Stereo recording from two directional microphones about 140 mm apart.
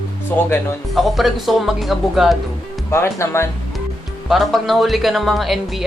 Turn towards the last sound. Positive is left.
turn(degrees=0)  # may be behind; listen again after turning